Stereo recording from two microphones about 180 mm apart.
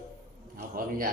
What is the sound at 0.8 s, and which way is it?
Speech, 50° right (ahead or behind).